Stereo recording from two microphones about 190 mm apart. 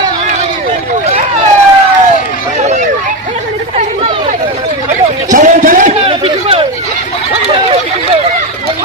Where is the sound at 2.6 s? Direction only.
40° right (ahead or behind).